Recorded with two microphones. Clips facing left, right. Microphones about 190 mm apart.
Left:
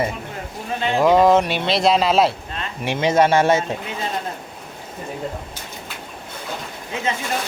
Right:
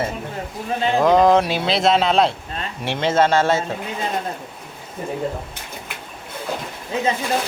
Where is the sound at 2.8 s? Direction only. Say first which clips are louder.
Left 1 dB; 15° left (ahead or behind).